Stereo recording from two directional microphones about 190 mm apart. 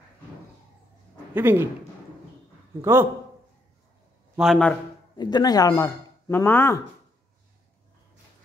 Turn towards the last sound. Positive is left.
turn(degrees=10)  # may be behind; listen again after turning